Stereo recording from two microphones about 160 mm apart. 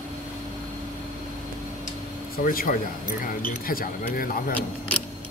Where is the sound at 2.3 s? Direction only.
65° left (ahead or behind).